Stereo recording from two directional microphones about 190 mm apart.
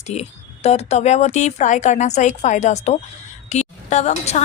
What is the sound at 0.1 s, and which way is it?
A woman's voice, 35° left (ahead or behind).